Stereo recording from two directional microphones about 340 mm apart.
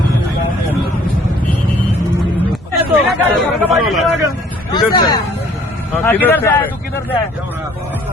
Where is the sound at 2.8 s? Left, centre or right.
Centre.